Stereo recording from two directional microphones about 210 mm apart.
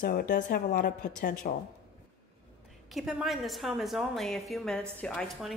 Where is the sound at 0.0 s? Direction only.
45° left (ahead or behind).